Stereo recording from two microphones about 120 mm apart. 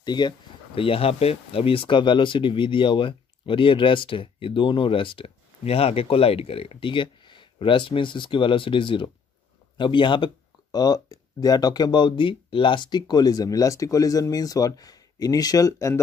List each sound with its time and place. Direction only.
0.0 s speech: 35° left (ahead or behind)
0.7 s speech: 50° left (ahead or behind); by 16.0 s 30° left (ahead or behind)